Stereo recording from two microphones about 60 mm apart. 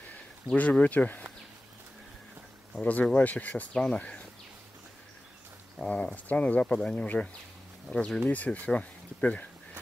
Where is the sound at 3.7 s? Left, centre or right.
Centre.